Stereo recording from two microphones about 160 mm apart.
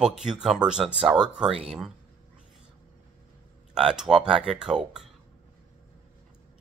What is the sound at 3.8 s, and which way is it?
Speech, 5° right (ahead or behind).